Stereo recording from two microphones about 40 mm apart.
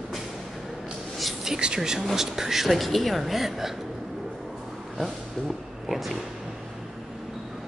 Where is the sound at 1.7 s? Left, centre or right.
Centre.